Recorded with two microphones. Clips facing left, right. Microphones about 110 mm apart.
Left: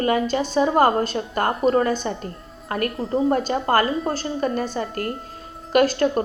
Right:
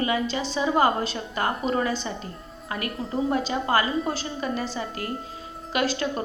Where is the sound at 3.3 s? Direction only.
50° left (ahead or behind).